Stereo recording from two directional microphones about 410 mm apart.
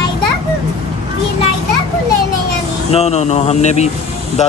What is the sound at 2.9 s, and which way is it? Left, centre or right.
Speech, centre.